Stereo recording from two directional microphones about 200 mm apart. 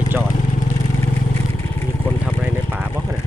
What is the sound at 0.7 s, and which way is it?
Vehicle, 20° left (ahead or behind).